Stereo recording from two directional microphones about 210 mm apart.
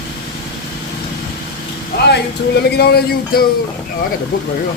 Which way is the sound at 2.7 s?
50° left (ahead or behind).